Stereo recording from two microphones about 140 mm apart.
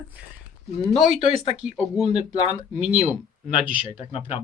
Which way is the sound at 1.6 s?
5° right (ahead or behind).